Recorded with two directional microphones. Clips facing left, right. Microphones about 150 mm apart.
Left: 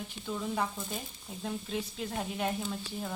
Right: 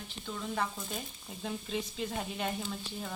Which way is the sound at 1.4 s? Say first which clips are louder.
Left 1 dB; centre (ahead or behind).